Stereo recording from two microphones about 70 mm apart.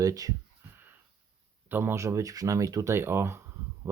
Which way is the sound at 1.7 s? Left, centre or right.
Right.